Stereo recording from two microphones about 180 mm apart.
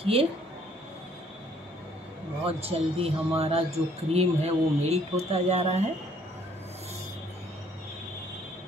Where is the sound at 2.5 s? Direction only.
35° right (ahead or behind).